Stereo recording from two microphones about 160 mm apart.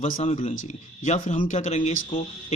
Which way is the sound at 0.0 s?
50° left (ahead or behind).